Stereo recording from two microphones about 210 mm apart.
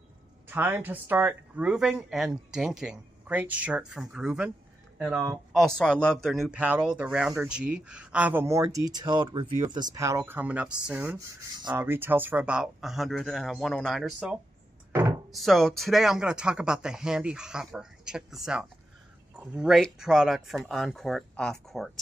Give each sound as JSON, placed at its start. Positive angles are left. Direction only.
{"t": 0.5, "sound": "speech", "side_deg": -10}
{"t": 5.5, "sound": "speech", "side_deg": 0}
{"t": 14.9, "sound": "chopping", "side_deg": -10}
{"t": 15.3, "sound": "speech", "side_deg": 0}